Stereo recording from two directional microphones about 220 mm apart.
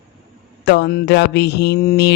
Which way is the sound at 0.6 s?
50° left (ahead or behind).